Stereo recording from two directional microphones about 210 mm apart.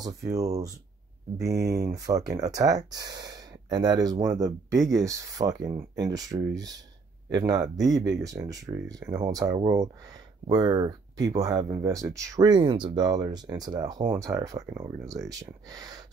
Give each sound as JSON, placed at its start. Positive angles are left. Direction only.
{"t": 1.4, "sound": "speech", "side_deg": -15}